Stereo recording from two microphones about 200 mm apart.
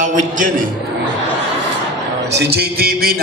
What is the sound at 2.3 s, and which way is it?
Music, 50° right (ahead or behind).